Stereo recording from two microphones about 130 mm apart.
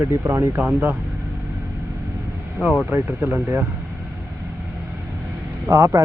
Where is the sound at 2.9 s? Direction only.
15° right (ahead or behind).